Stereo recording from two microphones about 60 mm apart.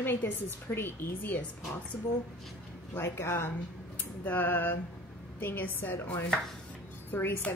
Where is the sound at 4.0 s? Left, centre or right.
Left.